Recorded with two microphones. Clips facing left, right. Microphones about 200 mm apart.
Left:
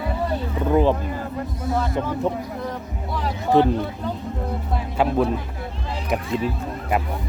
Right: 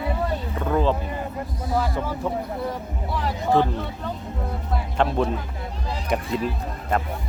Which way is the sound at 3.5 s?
20° left (ahead or behind).